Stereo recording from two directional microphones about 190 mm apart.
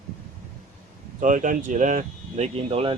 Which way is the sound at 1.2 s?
45° right (ahead or behind).